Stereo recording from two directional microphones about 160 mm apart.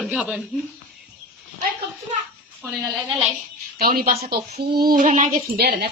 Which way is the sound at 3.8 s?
65° right (ahead or behind).